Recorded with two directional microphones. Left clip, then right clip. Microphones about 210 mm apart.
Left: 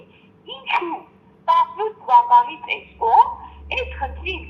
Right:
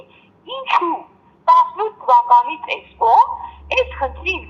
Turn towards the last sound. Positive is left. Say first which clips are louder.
# right 6 dB
turn(degrees=-30)  # may be behind; listen again after turning